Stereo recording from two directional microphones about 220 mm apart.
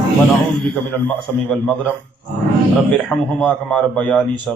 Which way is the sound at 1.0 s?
5° left (ahead or behind).